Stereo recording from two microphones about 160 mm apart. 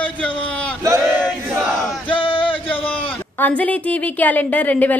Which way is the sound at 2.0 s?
30° left (ahead or behind).